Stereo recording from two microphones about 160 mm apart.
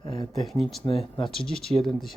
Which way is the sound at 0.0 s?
25° left (ahead or behind).